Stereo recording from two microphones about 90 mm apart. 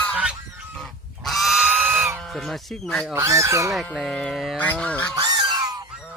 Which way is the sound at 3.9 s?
10° left (ahead or behind).